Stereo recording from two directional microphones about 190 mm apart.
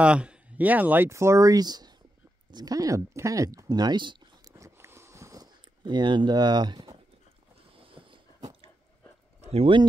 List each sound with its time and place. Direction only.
0.0 s speech: 5° right (ahead or behind); by 1.9 s 20° right (ahead or behind)
2.5 s a sound: 20° right (ahead or behind)
9.4 s speech: 30° right (ahead or behind)